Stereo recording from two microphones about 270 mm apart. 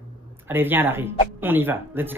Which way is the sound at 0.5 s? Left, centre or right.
Centre.